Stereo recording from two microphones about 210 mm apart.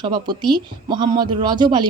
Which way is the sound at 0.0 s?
20° right (ahead or behind).